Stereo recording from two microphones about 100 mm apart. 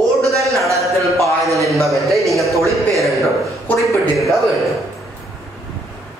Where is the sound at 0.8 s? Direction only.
Centre (ahead or behind).